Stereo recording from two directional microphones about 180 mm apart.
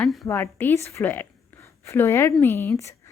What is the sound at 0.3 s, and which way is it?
A woman's voice, 15° left (ahead or behind).